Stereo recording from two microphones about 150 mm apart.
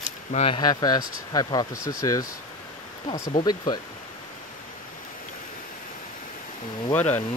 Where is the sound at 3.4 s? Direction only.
30° left (ahead or behind).